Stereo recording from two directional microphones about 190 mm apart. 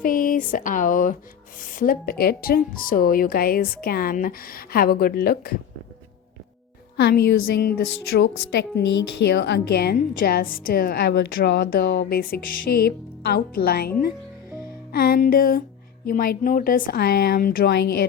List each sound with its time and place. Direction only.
0.0 s a woman's voice: 45° left (ahead or behind)
6.9 s a woman's voice: 60° left (ahead or behind)
14.9 s a woman's voice: 50° left (ahead or behind)